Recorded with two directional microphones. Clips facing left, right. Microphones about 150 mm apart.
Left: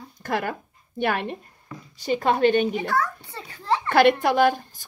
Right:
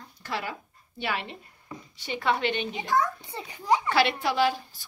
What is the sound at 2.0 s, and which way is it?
Speech, 40° left (ahead or behind).